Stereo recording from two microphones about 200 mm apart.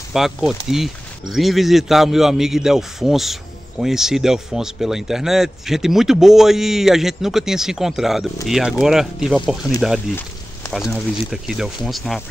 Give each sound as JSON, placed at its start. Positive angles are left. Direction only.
{"t": 0.1, "sound": "speech", "side_deg": 0}